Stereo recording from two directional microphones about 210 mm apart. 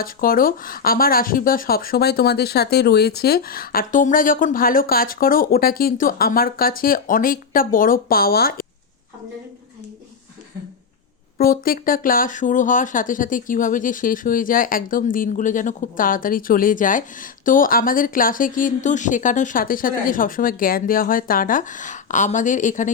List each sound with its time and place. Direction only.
0.0 s speech: 45° left (ahead or behind)
11.3 s speech: 45° left (ahead or behind)